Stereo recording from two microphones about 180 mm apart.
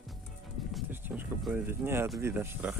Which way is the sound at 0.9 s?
10° right (ahead or behind).